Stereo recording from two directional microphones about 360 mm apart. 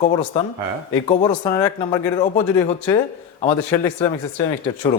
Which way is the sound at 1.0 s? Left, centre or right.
Centre.